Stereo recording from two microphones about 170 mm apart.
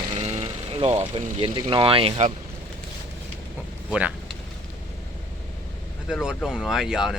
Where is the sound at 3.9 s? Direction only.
5° right (ahead or behind).